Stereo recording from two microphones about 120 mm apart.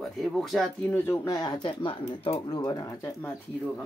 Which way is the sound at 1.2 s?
30° left (ahead or behind).